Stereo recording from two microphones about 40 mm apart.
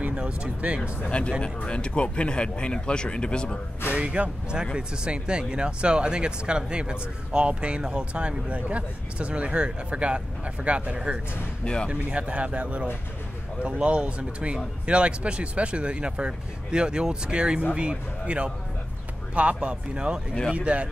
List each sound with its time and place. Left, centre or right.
1.1 s speech: left
3.9 s speech: right
11.6 s speech: left
11.9 s a man's voice: right
13.8 s a man's voice: right